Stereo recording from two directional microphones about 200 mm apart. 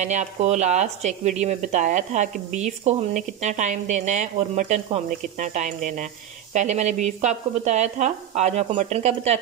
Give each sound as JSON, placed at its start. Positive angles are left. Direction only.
{"t": 0.0, "sound": "speech", "side_deg": -35}